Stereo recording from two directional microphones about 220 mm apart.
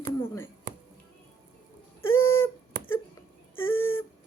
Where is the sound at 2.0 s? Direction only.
65° left (ahead or behind).